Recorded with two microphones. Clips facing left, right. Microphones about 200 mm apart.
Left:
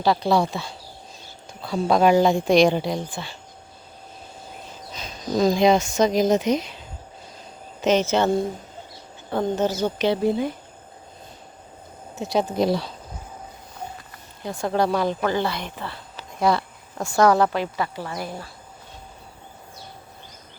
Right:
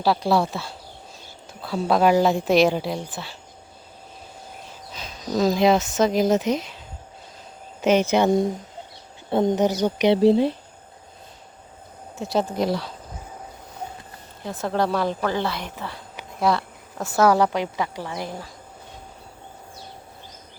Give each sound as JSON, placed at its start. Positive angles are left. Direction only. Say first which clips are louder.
{"t": 0.0, "sound": "speech", "louder": "even", "side_deg": -5}
{"t": 4.9, "sound": "speech", "louder": "left 1 dB", "side_deg": -5}
{"t": 7.8, "sound": "speech", "louder": "right 1 dB", "side_deg": -10}
{"t": 12.1, "sound": "speech", "louder": "left 1 dB", "side_deg": 0}
{"t": 12.5, "sound": "speech", "louder": "left 2 dB", "side_deg": 25}
{"t": 14.4, "sound": "speech", "louder": "left 1 dB", "side_deg": 0}
{"t": 16.4, "sound": "speech", "louder": "left 1 dB", "side_deg": 0}